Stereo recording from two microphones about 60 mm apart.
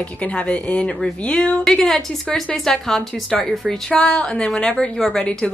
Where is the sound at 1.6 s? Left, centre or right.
Centre.